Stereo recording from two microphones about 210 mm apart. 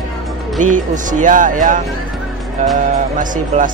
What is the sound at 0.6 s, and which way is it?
Speech, 35° right (ahead or behind).